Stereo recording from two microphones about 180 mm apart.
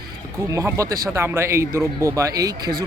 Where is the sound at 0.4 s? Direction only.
20° right (ahead or behind).